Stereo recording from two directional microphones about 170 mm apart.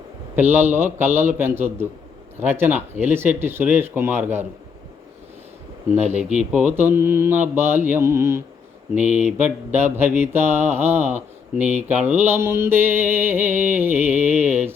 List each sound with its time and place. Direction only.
0.5 s mantra: 10° right (ahead or behind)
5.9 s speech: 40° right (ahead or behind)
6.5 s mantra: 5° right (ahead or behind)
9.0 s speech: 45° right (ahead or behind)
9.7 s mantra: 10° right (ahead or behind)